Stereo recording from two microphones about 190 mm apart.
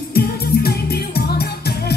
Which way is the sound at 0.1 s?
55° left (ahead or behind).